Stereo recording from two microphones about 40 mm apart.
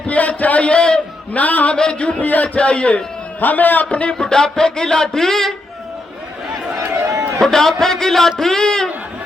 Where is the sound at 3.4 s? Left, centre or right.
Left.